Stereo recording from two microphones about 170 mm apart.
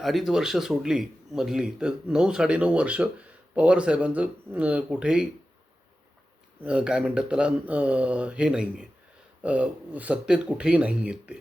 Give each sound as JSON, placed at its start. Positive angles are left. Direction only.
{"t": 0.0, "sound": "speech", "side_deg": 0}
{"t": 6.6, "sound": "speech", "side_deg": -5}